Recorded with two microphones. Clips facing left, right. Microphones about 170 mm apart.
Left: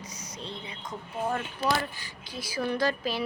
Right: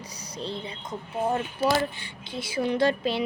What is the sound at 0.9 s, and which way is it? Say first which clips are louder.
Speech: right 4 dB; 20° right (ahead or behind).